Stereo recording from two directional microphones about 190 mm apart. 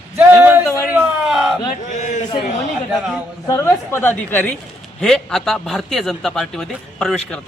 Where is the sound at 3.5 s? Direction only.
15° left (ahead or behind).